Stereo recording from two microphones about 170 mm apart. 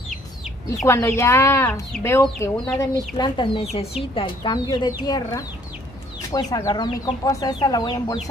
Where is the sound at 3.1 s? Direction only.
25° left (ahead or behind).